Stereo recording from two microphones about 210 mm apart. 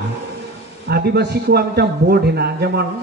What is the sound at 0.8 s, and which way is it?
A man's voice, 50° right (ahead or behind).